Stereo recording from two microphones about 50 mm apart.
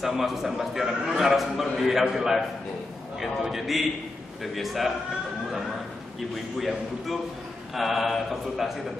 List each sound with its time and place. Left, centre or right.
0.0 s a man's voice: centre
7.7 s a man's voice: centre